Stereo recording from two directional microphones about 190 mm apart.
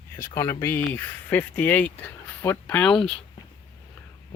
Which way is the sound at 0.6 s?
10° left (ahead or behind).